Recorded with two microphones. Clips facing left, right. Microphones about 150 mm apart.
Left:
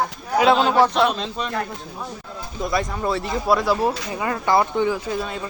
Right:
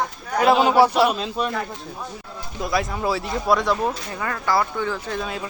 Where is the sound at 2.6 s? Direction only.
Centre (ahead or behind).